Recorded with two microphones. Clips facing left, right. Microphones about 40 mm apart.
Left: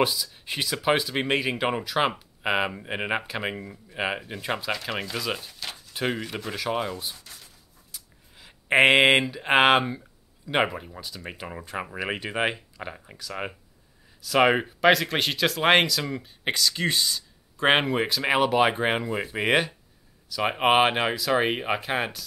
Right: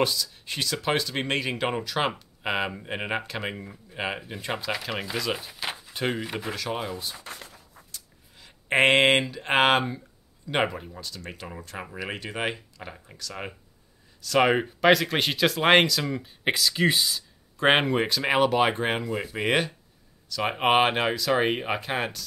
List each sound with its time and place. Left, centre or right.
0.0 s speech: centre
5.2 s speech: centre
5.5 s a sound: centre
5.9 s speech: centre
6.2 s speech: centre
6.5 s speech: centre
7.2 s a sound: right
7.9 s speech: centre